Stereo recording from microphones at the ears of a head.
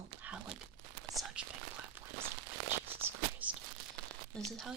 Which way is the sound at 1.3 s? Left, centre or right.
Right.